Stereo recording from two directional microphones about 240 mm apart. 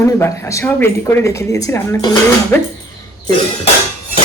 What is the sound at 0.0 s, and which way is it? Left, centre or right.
A woman's voice, centre.